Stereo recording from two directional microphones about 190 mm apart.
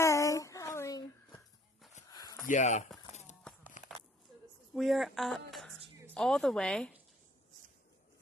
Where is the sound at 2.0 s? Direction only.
20° left (ahead or behind).